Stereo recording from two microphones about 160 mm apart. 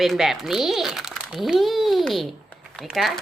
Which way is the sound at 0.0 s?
Centre (ahead or behind).